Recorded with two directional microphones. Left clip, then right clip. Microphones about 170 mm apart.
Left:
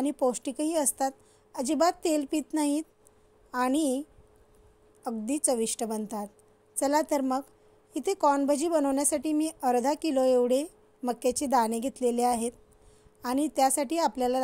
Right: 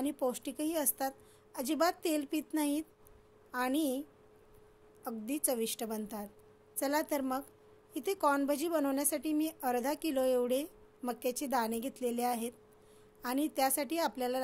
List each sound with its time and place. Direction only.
0.0 s a woman's voice: 45° left (ahead or behind)